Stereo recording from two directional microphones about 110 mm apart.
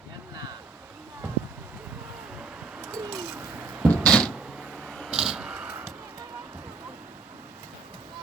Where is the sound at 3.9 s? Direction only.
5° left (ahead or behind).